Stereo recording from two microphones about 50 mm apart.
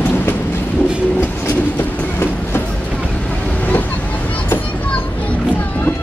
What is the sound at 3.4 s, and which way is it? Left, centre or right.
Vehicle, left.